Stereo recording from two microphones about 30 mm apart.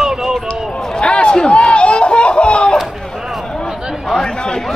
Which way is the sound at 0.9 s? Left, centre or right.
Left.